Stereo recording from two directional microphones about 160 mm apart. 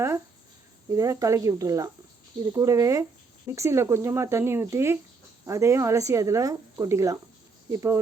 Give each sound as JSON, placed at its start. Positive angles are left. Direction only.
{"t": 0.9, "sound": "speech", "side_deg": -20}